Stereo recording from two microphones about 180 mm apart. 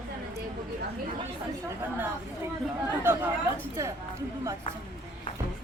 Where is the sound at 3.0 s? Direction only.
10° right (ahead or behind).